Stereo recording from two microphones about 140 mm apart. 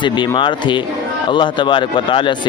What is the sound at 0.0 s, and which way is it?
Speech, 35° left (ahead or behind).